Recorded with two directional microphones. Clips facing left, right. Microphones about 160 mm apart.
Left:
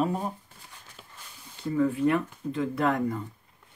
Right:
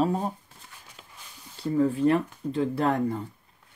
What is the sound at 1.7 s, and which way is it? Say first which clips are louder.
Speech: right 2 dB; 35° right (ahead or behind).